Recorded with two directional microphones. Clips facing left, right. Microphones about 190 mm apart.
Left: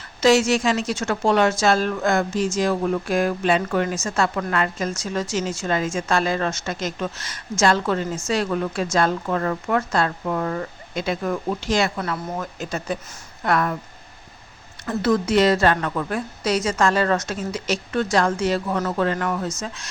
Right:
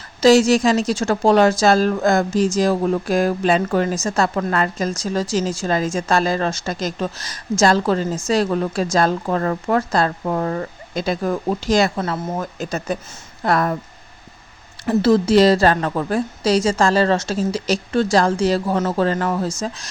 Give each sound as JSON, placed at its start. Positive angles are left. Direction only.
{"t": 0.2, "sound": "a woman's voice", "side_deg": -35}
{"t": 11.9, "sound": "speech", "side_deg": -25}
{"t": 12.4, "sound": "a woman's voice", "side_deg": -40}
{"t": 14.8, "sound": "a woman's voice", "side_deg": -30}